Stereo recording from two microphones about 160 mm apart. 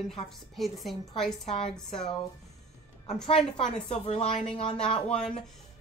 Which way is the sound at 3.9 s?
40° left (ahead or behind).